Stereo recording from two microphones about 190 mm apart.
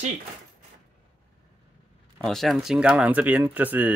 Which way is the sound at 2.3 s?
Centre (ahead or behind).